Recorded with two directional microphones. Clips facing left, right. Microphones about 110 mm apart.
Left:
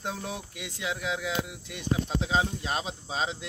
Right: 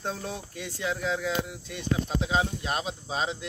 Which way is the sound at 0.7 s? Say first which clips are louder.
Right 3 dB; 10° left (ahead or behind).